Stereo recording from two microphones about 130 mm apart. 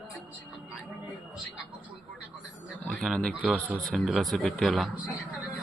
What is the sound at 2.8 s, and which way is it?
Speech, 5° left (ahead or behind).